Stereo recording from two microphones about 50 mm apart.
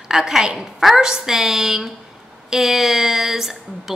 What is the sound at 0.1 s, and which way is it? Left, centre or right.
A woman's voice, centre.